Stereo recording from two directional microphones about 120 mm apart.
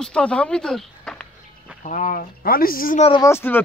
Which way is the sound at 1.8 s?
90° left.